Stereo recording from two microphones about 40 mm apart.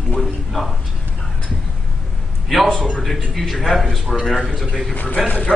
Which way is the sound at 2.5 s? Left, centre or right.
Centre.